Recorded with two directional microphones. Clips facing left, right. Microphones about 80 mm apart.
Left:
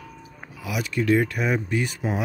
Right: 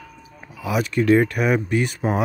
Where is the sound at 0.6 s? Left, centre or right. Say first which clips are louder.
Right 5 dB; right.